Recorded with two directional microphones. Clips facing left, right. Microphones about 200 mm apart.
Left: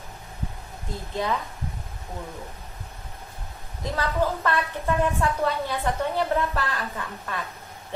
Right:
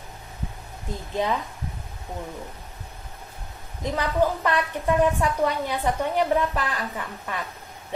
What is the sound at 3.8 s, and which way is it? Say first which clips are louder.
A woman's voice: right 2 dB; 15° right (ahead or behind).